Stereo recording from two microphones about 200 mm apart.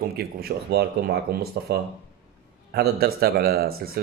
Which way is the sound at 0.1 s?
50° right (ahead or behind).